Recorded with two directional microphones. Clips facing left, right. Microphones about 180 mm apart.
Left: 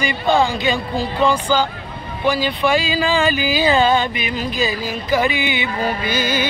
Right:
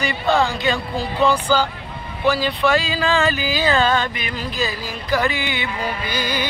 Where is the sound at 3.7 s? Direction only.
15° left (ahead or behind).